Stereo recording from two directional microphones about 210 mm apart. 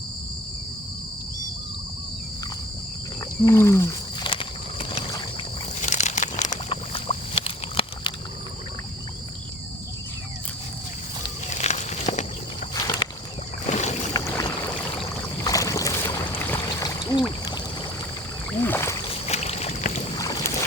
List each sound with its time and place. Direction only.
3.4 s wild animals: 15° left (ahead or behind)
4.3 s vehicle: 25° left (ahead or behind)
5.8 s a sound: 35° left (ahead or behind)
11.4 s walk: 35° left (ahead or behind)
12.7 s a sound: 20° left (ahead or behind)
13.7 s boat: 35° left (ahead or behind)
14.1 s boat: 15° left (ahead or behind)
15.4 s boat: 15° left (ahead or behind)
18.6 s boat: 10° left (ahead or behind)
19.2 s boat: 30° left (ahead or behind)
20.1 s boat: 15° left (ahead or behind)